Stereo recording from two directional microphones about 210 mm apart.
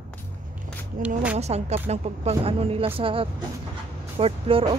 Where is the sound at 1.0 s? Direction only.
40° right (ahead or behind).